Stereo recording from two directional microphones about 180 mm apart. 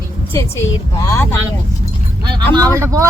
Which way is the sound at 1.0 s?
15° left (ahead or behind).